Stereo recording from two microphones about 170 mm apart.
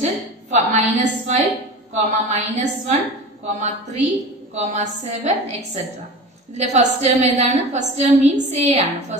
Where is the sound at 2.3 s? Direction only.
40° right (ahead or behind).